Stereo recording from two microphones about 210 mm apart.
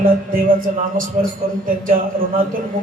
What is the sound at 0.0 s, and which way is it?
Speech, 40° right (ahead or behind).